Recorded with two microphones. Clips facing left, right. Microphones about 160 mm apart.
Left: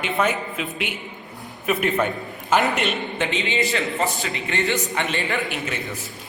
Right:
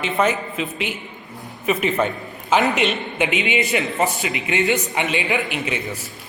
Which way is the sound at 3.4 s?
20° right (ahead or behind).